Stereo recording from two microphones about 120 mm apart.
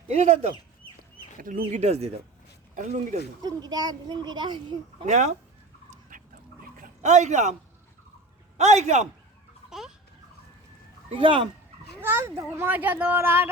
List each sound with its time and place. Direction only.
0.1 s speech: 65° right (ahead or behind)
1.7 s speech: 65° right (ahead or behind)
2.7 s a man's voice: 80° right
3.4 s a child's voice: 35° right (ahead or behind)
5.0 s speech: 80° right
7.0 s a man's voice: 75° right (ahead or behind)
8.5 s a man's voice: 70° right (ahead or behind)
9.6 s chicken: 5° right (ahead or behind)
11.1 s speech: 45° right (ahead or behind)
11.9 s a child's voice: 20° right (ahead or behind)